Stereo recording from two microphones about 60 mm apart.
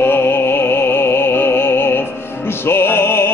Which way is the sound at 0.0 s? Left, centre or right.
Left.